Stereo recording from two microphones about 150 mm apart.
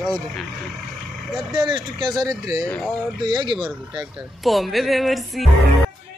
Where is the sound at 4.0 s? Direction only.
Centre (ahead or behind).